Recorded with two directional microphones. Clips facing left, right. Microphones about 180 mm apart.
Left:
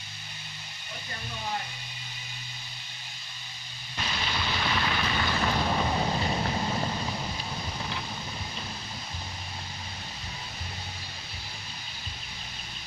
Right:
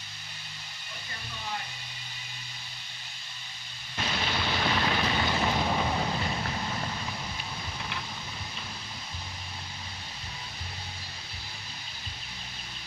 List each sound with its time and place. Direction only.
4.0 s rain: 50° right (ahead or behind)
4.8 s vehicle: 25° right (ahead or behind)
5.6 s a sound: 5° right (ahead or behind)
6.1 s vehicle: 25° left (ahead or behind)